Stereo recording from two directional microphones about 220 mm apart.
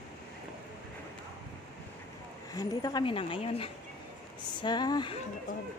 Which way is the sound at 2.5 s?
15° left (ahead or behind).